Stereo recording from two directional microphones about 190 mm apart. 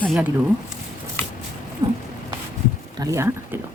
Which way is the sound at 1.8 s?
20° right (ahead or behind).